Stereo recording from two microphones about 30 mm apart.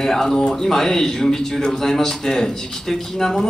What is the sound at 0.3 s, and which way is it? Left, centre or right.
Speech, left.